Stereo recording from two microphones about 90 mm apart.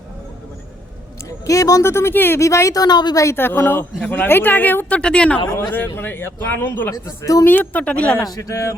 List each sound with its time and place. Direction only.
1.3 s speech: 40° left (ahead or behind)
3.2 s speech: 25° left (ahead or behind)
5.7 s speech: 25° left (ahead or behind)
7.0 s speech: 35° left (ahead or behind)
7.4 s speech: 20° left (ahead or behind)
8.3 s speech: 40° left (ahead or behind)